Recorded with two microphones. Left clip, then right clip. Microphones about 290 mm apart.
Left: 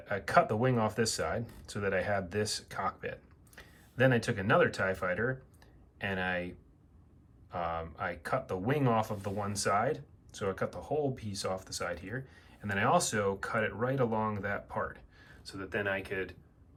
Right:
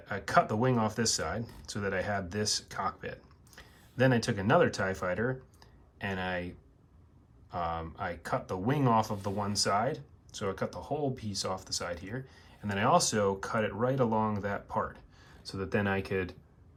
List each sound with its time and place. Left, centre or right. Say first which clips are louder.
0.0 s speech: even; centre